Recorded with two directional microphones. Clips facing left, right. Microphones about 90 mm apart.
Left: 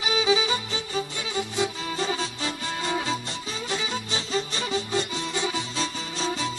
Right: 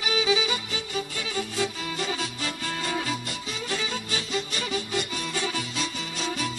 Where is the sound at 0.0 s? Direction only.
25° left (ahead or behind).